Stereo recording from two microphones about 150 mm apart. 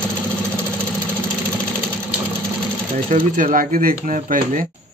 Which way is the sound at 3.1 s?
65° right (ahead or behind).